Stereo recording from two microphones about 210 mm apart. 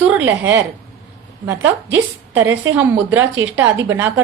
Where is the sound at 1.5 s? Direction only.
60° right (ahead or behind).